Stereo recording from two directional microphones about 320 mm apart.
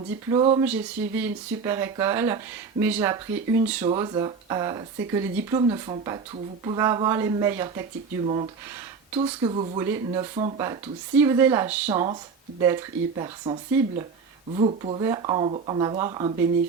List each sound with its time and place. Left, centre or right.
0.3 s speech: centre
9.1 s speech: centre